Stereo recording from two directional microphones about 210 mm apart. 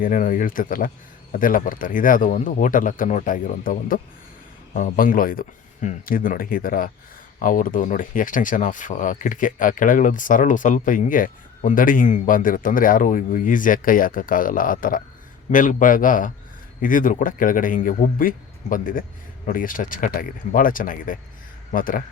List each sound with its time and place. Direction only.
0.0 s speech: 40° left (ahead or behind)